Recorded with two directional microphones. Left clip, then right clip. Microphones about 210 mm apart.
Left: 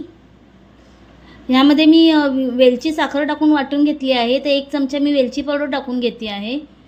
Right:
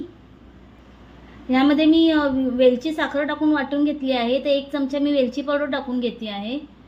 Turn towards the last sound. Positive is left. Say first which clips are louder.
# left 5 dB
turn(degrees=15)  # may be behind; listen again after turning